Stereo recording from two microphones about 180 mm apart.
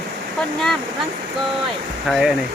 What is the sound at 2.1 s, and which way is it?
Speech, 5° right (ahead or behind).